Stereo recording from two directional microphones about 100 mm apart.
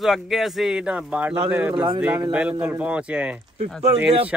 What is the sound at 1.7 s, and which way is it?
Speech, 50° right (ahead or behind).